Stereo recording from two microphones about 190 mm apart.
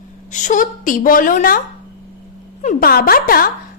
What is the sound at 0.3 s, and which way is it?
A child's voice, 40° left (ahead or behind).